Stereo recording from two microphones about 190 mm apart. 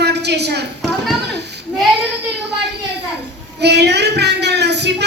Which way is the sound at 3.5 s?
60° right (ahead or behind).